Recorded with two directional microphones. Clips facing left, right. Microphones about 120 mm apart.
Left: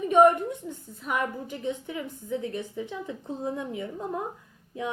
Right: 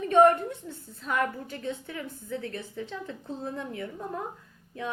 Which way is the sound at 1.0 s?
15° left (ahead or behind).